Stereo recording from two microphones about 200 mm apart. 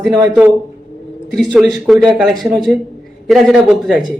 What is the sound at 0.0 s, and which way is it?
A man's voice, 10° right (ahead or behind).